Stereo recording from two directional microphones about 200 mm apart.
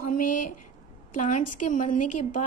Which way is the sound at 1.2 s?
40° left (ahead or behind).